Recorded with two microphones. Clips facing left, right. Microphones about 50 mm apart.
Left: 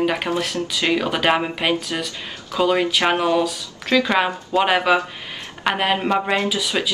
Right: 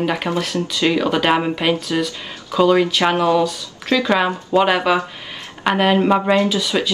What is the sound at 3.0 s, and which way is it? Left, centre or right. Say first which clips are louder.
Speech: right 2 dB; centre.